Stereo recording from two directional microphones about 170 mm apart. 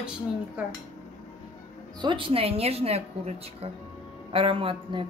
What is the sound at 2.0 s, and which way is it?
A woman's voice, 30° right (ahead or behind).